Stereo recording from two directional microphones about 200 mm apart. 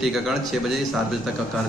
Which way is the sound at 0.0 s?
Centre (ahead or behind).